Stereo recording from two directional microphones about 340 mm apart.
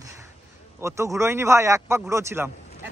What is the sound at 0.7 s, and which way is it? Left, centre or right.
Speech, centre.